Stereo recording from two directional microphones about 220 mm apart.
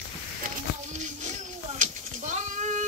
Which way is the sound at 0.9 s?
30° right (ahead or behind).